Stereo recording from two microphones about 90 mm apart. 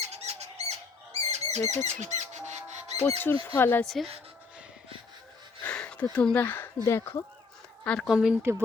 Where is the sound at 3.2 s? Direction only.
30° left (ahead or behind).